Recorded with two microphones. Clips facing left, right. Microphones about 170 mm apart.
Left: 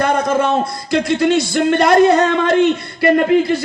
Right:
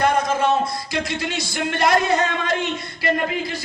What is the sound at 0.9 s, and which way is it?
Speech, 55° left (ahead or behind).